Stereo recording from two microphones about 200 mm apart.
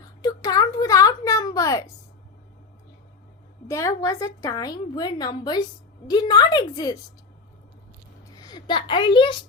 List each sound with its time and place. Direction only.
0.2 s a sound: 20° left (ahead or behind)
3.7 s a woman's voice: 15° left (ahead or behind)
8.4 s a woman's voice: 20° left (ahead or behind)